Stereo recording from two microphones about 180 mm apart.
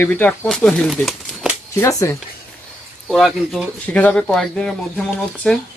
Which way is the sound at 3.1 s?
Centre (ahead or behind).